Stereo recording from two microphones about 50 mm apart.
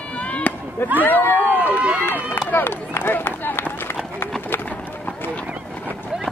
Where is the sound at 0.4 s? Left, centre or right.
Left.